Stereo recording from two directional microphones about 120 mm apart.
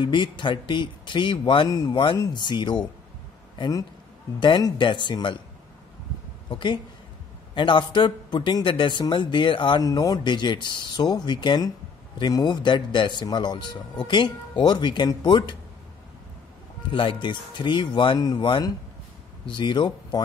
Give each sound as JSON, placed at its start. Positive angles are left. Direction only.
{"t": 0.0, "sound": "a man's voice", "side_deg": 40}
{"t": 6.5, "sound": "a man's voice", "side_deg": 40}
{"t": 16.9, "sound": "a man's voice", "side_deg": 45}